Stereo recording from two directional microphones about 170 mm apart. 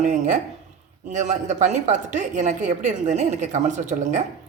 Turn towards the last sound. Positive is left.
turn(degrees=-45)  # may be behind; listen again after turning